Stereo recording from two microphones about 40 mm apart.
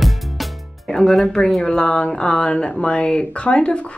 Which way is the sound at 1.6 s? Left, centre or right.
Left.